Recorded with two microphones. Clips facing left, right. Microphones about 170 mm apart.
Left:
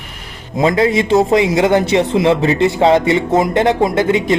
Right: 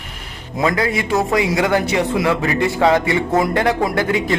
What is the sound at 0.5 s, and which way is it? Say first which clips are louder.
A man's voice: left 5 dB; 25° left (ahead or behind).